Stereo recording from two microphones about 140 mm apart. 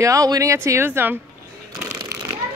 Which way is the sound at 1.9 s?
25° right (ahead or behind).